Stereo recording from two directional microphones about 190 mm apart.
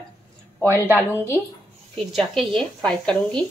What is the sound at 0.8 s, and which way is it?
A woman's voice, 10° right (ahead or behind).